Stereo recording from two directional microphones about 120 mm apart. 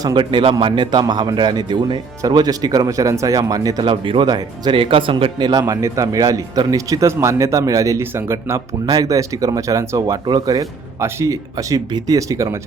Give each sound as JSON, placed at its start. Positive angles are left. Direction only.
{"t": 0.0, "sound": "speech", "side_deg": -40}